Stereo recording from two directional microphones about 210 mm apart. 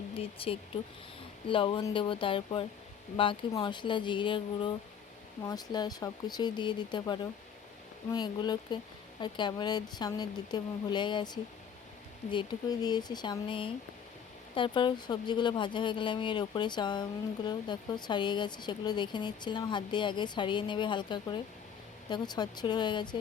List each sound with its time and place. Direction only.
0.2 s speech: 25° left (ahead or behind)